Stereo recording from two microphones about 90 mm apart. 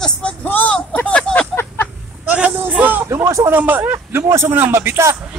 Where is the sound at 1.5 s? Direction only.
25° left (ahead or behind).